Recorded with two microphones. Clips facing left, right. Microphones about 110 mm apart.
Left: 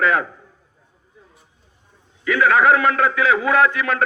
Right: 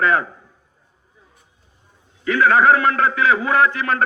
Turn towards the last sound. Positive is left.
turn(degrees=-35)  # may be behind; listen again after turning